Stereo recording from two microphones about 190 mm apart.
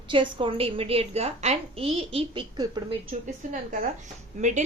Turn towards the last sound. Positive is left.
turn(degrees=-40)  # may be behind; listen again after turning